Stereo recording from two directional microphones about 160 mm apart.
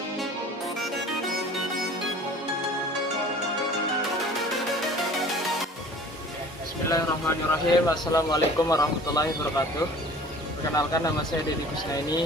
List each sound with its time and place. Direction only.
6.9 s speech: 20° left (ahead or behind)
10.8 s speech: 20° left (ahead or behind)